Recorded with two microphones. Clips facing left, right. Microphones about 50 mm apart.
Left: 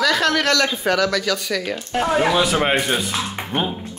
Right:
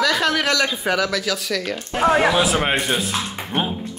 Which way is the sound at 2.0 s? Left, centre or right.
Right.